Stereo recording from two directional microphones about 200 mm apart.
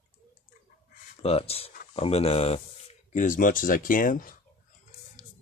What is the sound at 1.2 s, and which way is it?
Speech, 30° left (ahead or behind).